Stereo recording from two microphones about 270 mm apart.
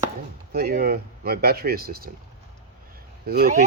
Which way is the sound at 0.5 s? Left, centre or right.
Right.